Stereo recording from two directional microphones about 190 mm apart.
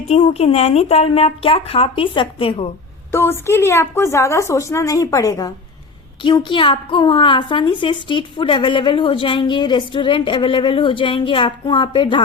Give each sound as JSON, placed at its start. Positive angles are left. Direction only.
{"t": 0.1, "sound": "speech", "side_deg": 35}
{"t": 3.1, "sound": "a woman's voice", "side_deg": 15}